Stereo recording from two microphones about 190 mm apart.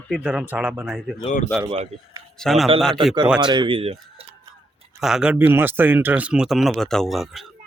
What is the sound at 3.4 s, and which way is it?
Speech, 25° right (ahead or behind).